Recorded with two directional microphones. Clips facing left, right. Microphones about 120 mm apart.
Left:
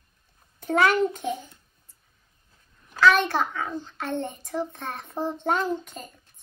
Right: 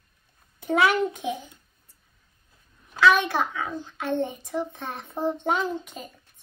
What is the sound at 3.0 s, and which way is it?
A child's voice, 10° right (ahead or behind).